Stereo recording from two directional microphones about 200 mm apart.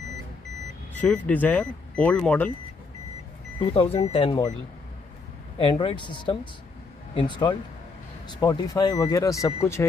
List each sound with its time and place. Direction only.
0.9 s speech: 5° left (ahead or behind)
3.7 s speech: 30° left (ahead or behind)
5.6 s speech: 25° left (ahead or behind)